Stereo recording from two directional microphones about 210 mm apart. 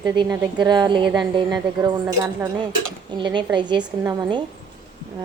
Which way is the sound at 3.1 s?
20° right (ahead or behind).